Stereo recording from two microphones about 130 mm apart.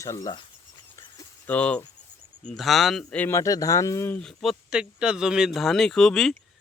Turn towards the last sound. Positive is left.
turn(degrees=5)  # may be behind; listen again after turning